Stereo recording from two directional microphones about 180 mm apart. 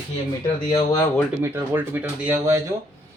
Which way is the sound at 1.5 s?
10° right (ahead or behind).